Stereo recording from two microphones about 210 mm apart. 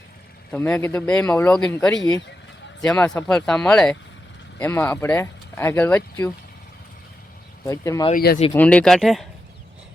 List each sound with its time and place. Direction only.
0.5 s speech: 10° left (ahead or behind)
7.6 s speech: 15° left (ahead or behind)
8.1 s speech: 45° left (ahead or behind)
8.5 s speech: 5° left (ahead or behind)